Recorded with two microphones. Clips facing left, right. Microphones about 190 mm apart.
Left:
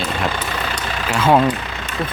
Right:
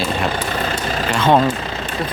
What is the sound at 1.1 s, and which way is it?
Speech, 5° left (ahead or behind).